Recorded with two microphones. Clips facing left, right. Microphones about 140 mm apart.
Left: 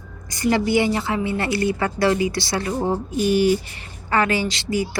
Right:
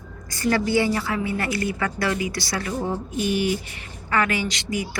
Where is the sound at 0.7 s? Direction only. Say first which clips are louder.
Left 2 dB; 20° left (ahead or behind).